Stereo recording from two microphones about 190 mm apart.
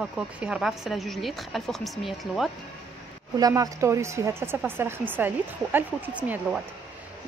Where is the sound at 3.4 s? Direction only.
20° right (ahead or behind).